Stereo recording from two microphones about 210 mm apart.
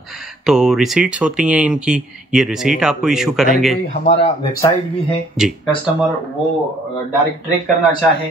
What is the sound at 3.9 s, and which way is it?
Speech, 30° left (ahead or behind).